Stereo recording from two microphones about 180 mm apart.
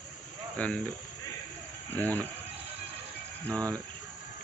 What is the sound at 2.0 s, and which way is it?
Speech, 10° left (ahead or behind).